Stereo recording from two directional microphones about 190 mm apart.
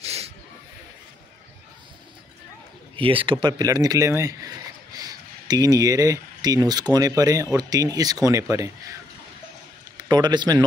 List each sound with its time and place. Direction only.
0.0 s hiss: 30° right (ahead or behind)
3.0 s speech: 30° right (ahead or behind)
9.9 s a man's voice: 20° right (ahead or behind)